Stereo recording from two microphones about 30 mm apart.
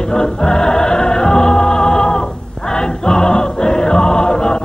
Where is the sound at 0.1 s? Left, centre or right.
Left.